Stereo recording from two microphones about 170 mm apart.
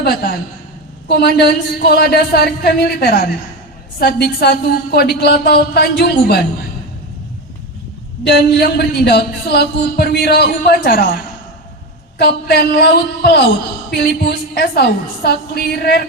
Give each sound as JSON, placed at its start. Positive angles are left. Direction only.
{"t": 0.0, "sound": "a woman's voice", "side_deg": 65}
{"t": 8.2, "sound": "a man's voice", "side_deg": 75}
{"t": 12.1, "sound": "a man's voice", "side_deg": 75}